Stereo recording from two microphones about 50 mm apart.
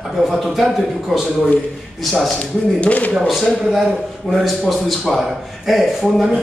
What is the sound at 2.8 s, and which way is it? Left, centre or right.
Speech, left.